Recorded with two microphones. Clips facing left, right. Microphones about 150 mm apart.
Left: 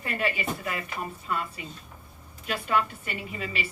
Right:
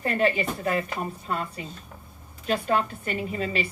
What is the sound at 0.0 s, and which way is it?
Speech, 40° right (ahead or behind).